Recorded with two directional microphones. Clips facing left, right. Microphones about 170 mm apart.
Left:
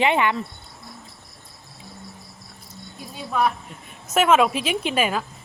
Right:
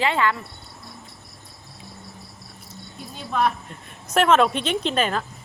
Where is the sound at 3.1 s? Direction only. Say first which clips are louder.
Even; 5° left (ahead or behind).